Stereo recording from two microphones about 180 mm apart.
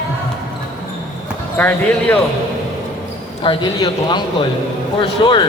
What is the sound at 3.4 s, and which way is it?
Speech, 30° left (ahead or behind).